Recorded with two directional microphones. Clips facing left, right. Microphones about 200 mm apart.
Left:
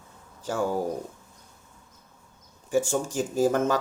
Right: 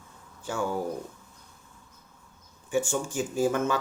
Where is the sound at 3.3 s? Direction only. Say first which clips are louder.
Left 3 dB; 40° left (ahead or behind).